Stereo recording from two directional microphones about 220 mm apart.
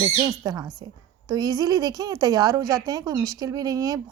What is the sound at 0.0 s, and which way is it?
Speech, 20° right (ahead or behind).